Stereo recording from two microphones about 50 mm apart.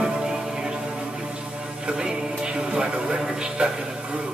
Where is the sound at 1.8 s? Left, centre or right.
Centre.